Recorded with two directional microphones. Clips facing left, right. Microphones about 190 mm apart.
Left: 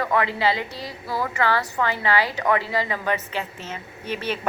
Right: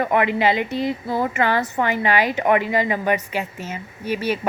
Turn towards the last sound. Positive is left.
turn(degrees=-10)  # may be behind; listen again after turning